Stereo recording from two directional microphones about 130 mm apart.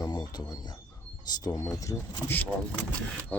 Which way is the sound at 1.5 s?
25° left (ahead or behind).